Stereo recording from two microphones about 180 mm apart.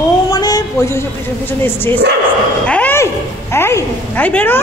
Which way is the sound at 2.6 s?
10° left (ahead or behind).